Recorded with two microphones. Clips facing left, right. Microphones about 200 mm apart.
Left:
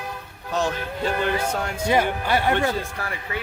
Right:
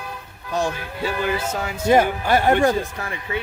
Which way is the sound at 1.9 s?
45° right (ahead or behind).